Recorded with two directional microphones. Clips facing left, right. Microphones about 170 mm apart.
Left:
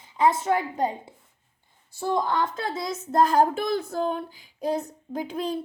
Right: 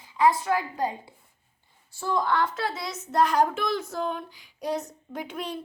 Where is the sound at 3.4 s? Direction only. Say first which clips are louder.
Left 2 dB; 35° left (ahead or behind).